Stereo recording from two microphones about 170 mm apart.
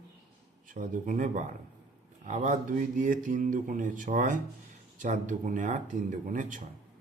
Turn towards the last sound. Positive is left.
turn(degrees=-50)  # may be behind; listen again after turning